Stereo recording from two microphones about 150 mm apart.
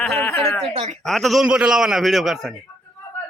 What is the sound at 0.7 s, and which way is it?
Speech, 45° right (ahead or behind).